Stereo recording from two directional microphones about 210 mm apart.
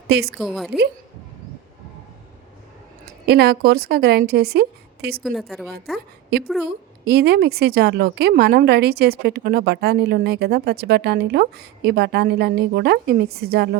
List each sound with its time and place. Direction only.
0.1 s a woman's voice: 50° right (ahead or behind)
0.3 s speech: centre (ahead or behind)
3.2 s a woman's voice: 50° right (ahead or behind)
5.2 s speech: centre (ahead or behind)
7.0 s a woman's voice: 50° right (ahead or behind)